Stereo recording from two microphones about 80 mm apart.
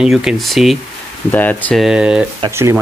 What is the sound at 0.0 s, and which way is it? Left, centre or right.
Speech, centre.